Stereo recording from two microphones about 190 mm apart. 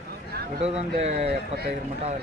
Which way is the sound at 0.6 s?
35° right (ahead or behind).